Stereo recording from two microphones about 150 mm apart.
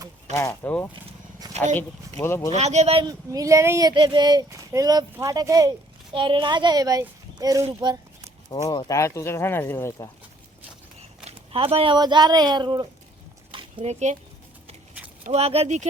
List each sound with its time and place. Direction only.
0.3 s speech: 15° left (ahead or behind)
2.6 s speech: 45° right (ahead or behind)
3.1 s speech: 25° right (ahead or behind)
6.1 s a woman's voice: 35° right (ahead or behind)
8.4 s speech: 25° left (ahead or behind)
11.3 s speech: 40° right (ahead or behind)
13.5 s a sound: 35° right (ahead or behind)
15.3 s speech: 40° right (ahead or behind)